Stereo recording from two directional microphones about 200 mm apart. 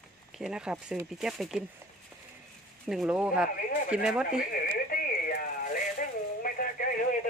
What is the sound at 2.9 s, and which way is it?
Speech, 5° right (ahead or behind).